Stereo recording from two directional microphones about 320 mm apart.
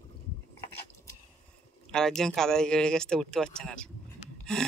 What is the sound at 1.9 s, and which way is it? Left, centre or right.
Speech, centre.